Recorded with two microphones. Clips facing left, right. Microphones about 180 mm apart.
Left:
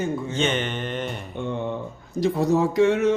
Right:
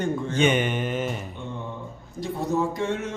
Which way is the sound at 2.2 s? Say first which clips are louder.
Left 5 dB; 80° left.